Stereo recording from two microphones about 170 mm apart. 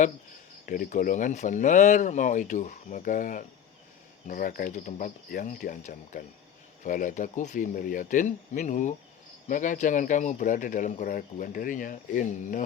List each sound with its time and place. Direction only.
0.6 s speech: 50° left (ahead or behind)